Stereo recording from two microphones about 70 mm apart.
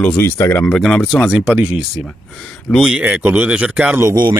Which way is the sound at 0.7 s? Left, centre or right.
Centre.